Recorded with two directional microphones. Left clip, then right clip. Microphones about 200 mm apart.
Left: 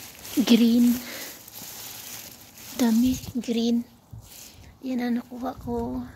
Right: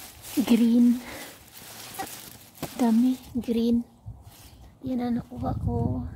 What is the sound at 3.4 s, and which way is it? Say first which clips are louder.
Speech: even; 25° right (ahead or behind).